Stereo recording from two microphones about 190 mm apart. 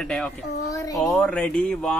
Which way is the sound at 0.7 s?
20° left (ahead or behind).